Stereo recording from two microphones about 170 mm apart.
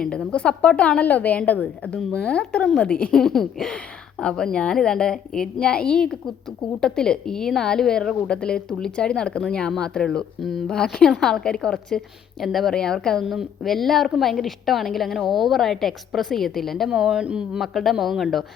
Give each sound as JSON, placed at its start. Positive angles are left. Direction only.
{"t": 0.0, "sound": "a woman's voice", "side_deg": 5}